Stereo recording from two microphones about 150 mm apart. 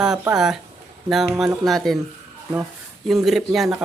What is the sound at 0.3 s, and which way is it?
Speech, 5° right (ahead or behind).